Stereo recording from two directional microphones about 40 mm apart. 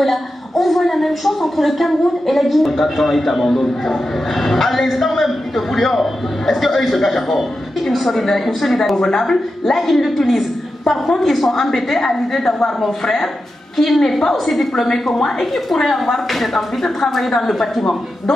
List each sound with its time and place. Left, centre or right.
0.0 s a woman's voice: centre
13.7 s a woman's voice: centre